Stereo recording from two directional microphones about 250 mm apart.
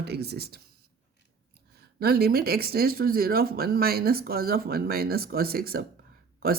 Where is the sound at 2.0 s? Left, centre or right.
Right.